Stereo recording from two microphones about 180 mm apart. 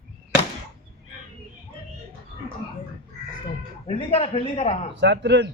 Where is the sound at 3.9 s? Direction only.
30° left (ahead or behind).